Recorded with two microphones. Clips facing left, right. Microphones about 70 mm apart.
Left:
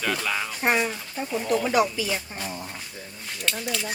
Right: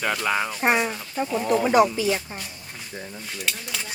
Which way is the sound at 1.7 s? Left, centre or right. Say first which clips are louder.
Right 4 dB; right.